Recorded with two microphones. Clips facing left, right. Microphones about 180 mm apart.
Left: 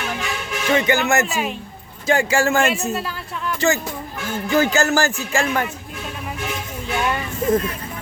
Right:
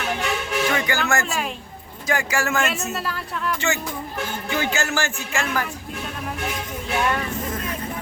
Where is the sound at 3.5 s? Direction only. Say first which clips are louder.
Left 5 dB; 35° left (ahead or behind).